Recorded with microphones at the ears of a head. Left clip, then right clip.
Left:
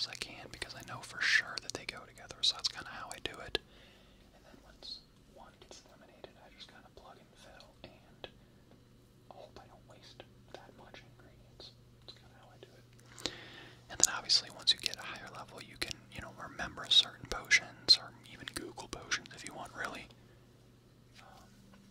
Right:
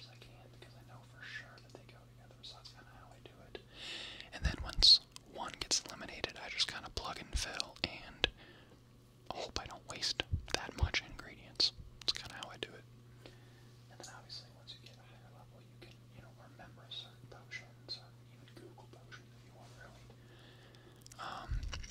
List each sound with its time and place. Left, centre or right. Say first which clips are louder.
0.0 s whispering: left 16 dB; left
3.7 s whispering: right 14 dB; right
9.3 s whispering: right 10 dB; right
13.2 s whispering: left 17 dB; left
21.2 s a sound: right 12 dB; right